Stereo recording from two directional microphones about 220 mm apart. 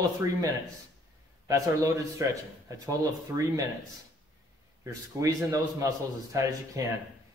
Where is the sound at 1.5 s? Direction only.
15° right (ahead or behind).